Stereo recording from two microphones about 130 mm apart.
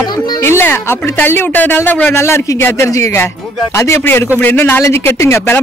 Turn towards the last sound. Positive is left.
turn(degrees=20)  # may be behind; listen again after turning